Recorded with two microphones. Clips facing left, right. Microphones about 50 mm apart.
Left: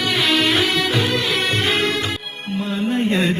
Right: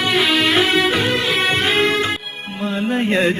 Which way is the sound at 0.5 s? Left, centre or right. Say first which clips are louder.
Right 3 dB; right.